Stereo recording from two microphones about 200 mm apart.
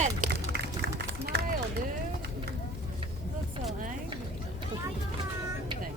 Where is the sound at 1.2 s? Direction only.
50° right (ahead or behind).